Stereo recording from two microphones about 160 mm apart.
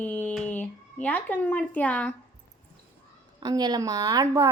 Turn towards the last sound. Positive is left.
turn(degrees=-20)  # may be behind; listen again after turning